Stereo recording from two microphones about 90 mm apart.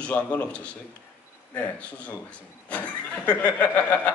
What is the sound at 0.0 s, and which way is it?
Speech, 15° left (ahead or behind).